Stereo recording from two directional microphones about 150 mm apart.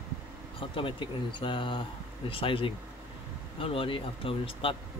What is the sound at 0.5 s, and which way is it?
Speech, 35° left (ahead or behind).